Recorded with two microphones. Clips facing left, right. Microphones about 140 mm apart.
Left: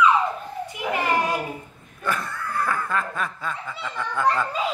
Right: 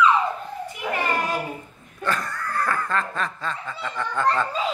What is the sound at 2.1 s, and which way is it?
Snicker, 5° left (ahead or behind).